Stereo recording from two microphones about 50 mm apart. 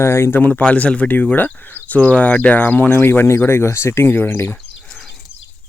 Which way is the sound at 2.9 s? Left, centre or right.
Left.